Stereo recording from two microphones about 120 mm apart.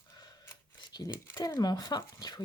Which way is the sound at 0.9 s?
35° left (ahead or behind).